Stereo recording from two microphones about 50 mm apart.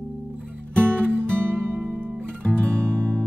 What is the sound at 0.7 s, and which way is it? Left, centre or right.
Music, right.